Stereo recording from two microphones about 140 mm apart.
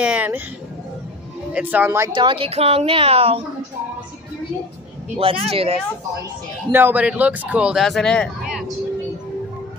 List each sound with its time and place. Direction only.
0.0 s speech: 10° right (ahead or behind)
1.5 s speech: 10° right (ahead or behind)
2.1 s a woman's voice: 40° right (ahead or behind)
5.2 s speech: 40° right (ahead or behind)
6.7 s speech: 15° right (ahead or behind)